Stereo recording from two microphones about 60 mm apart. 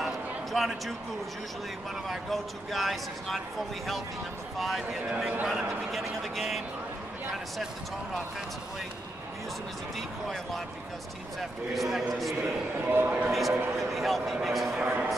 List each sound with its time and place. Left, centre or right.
0.0 s a sound: centre
2.0 s speech: centre
4.6 s speech: centre
9.9 s speech: centre
11.7 s speech: centre
12.8 s a man's voice: right
13.3 s speech: centre
14.8 s a man's voice: right